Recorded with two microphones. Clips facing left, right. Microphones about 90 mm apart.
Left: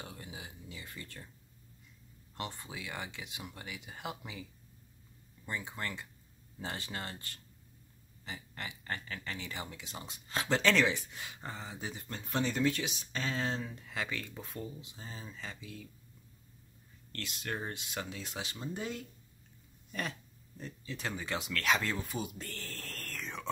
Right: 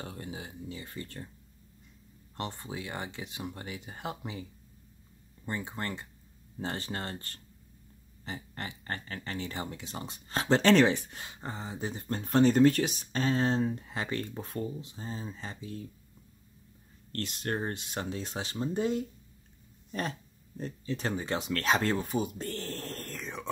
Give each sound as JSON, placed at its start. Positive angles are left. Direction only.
{"t": 0.0, "sound": "a sound", "side_deg": -40}
{"t": 2.3, "sound": "speech", "side_deg": -35}
{"t": 5.5, "sound": "speech", "side_deg": -35}
{"t": 11.2, "sound": "speech", "side_deg": -30}
{"t": 12.2, "sound": "speech", "side_deg": -50}
{"t": 17.1, "sound": "speech", "side_deg": -40}